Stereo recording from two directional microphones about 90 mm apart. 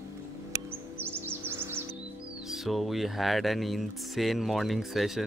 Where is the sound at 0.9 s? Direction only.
25° right (ahead or behind).